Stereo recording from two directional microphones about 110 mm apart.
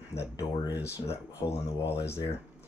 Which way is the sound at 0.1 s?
30° left (ahead or behind).